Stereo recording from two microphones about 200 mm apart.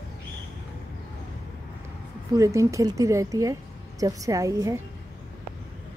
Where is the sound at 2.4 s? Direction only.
15° right (ahead or behind).